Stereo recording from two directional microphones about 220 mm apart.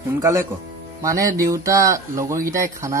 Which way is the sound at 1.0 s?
15° right (ahead or behind).